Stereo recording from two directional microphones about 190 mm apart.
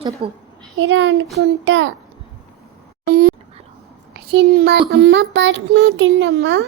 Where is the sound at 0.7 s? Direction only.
85° right.